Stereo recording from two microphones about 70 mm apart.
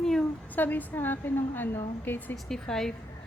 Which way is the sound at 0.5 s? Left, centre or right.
Left.